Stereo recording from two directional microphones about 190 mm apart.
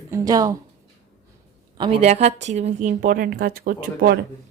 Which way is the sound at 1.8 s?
30° right (ahead or behind).